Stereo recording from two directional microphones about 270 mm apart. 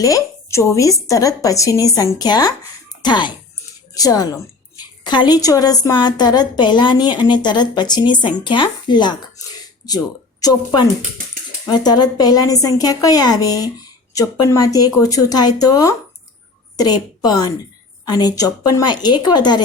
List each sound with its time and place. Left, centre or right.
0.0 s a woman's voice: centre
11.6 s a woman's voice: centre